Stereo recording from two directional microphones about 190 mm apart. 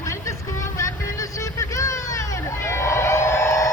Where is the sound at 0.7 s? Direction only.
15° left (ahead or behind).